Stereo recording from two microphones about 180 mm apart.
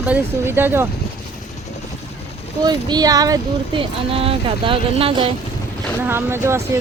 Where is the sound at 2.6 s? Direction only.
25° right (ahead or behind).